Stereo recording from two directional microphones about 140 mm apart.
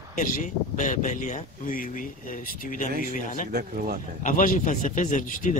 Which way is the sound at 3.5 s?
90° right.